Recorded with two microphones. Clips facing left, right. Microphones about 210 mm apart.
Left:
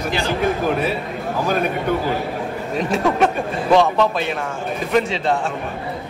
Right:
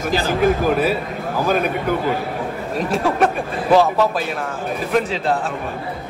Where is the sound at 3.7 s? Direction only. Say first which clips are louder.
Right 1 dB; 5° right (ahead or behind).